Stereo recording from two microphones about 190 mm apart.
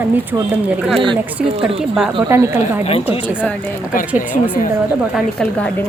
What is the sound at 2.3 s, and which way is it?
Speech, 10° right (ahead or behind).